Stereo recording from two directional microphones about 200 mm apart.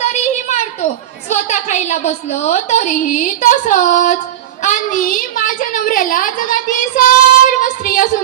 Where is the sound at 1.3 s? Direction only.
35° left (ahead or behind).